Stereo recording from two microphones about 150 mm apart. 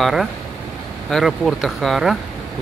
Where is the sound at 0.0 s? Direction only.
Centre (ahead or behind).